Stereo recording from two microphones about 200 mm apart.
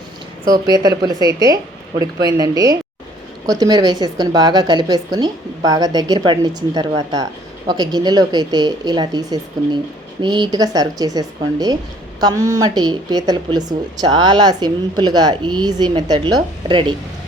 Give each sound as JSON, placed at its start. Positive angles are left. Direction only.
{"t": 0.4, "sound": "a woman's voice", "side_deg": -20}